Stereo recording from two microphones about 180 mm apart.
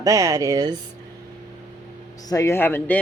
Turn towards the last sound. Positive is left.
turn(degrees=10)  # may be behind; listen again after turning